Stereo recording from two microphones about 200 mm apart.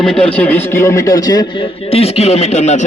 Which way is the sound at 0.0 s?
5° left (ahead or behind).